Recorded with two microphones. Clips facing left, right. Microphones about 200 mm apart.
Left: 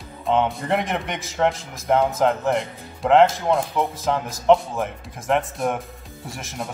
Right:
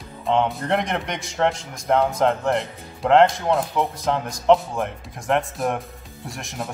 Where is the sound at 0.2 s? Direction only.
Centre (ahead or behind).